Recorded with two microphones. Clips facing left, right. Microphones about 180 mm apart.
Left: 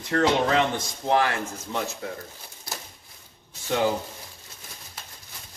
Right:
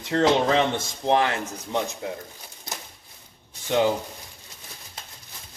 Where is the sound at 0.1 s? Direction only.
25° right (ahead or behind).